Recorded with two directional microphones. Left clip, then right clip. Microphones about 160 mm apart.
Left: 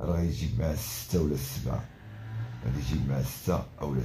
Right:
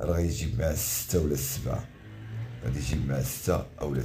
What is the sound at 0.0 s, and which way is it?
Speech, 20° right (ahead or behind).